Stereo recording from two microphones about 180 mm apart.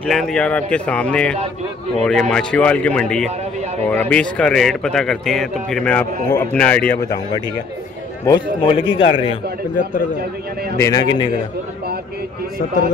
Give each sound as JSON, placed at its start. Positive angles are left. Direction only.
{"t": 0.0, "sound": "speech", "side_deg": 0}
{"t": 8.3, "sound": "a man's voice", "side_deg": 25}
{"t": 10.8, "sound": "a man's voice", "side_deg": 20}